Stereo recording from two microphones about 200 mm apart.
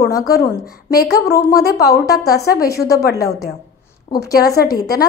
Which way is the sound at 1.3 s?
15° left (ahead or behind).